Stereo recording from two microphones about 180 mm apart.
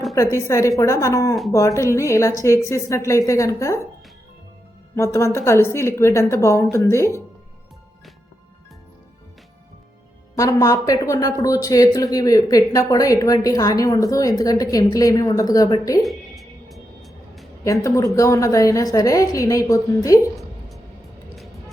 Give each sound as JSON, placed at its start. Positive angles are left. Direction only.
{"t": 0.3, "sound": "a woman's voice", "side_deg": 15}
{"t": 4.9, "sound": "a woman's voice", "side_deg": 15}
{"t": 10.3, "sound": "a woman's voice", "side_deg": 20}
{"t": 16.0, "sound": "music", "side_deg": 0}
{"t": 17.6, "sound": "a woman's voice", "side_deg": 15}